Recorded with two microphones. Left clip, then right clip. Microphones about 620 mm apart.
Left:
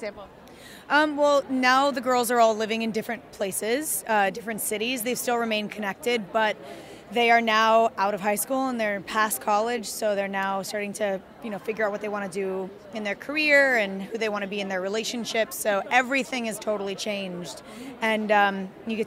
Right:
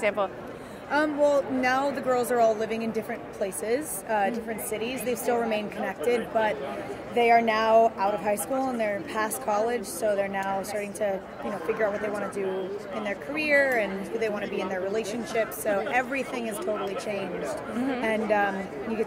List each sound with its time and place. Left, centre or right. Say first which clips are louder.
0.8 s speech: left 2 dB; left
12.9 s a woman's voice: left 4 dB; left